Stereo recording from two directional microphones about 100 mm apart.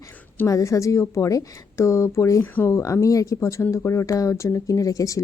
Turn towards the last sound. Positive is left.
turn(degrees=35)  # may be behind; listen again after turning